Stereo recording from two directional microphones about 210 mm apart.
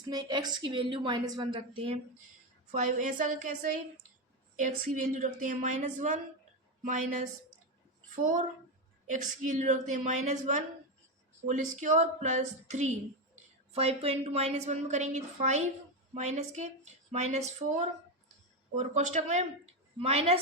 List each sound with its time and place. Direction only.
0.0 s a woman's voice: 20° right (ahead or behind)
2.7 s a woman's voice: 40° right (ahead or behind)
8.2 s a woman's voice: 40° right (ahead or behind)